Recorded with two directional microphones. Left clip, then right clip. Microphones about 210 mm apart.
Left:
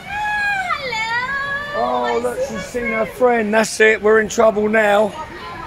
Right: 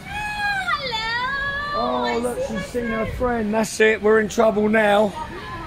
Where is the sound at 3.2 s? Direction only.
30° left (ahead or behind).